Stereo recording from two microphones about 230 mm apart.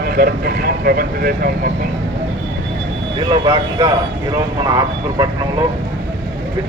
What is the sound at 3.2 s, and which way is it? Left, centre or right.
A man's voice, centre.